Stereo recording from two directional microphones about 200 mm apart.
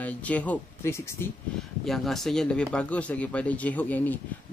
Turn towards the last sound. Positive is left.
turn(degrees=10)  # may be behind; listen again after turning